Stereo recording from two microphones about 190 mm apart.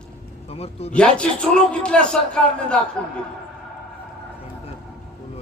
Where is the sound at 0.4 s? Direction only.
30° left (ahead or behind).